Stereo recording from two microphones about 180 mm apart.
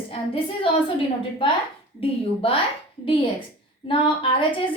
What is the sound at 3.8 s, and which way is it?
Speech, 30° left (ahead or behind).